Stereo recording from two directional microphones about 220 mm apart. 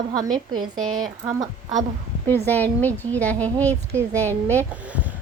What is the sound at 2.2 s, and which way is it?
Speech, 10° left (ahead or behind).